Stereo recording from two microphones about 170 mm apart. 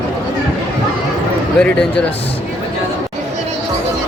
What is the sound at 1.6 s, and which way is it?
Speech, 5° left (ahead or behind).